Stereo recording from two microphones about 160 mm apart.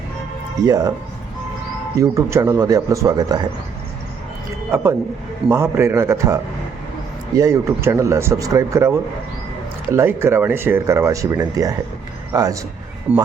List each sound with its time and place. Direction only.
0.6 s speech: 20° right (ahead or behind)
2.0 s speech: 20° right (ahead or behind)
4.7 s speech: 15° right (ahead or behind)
13.1 s speech: 5° right (ahead or behind)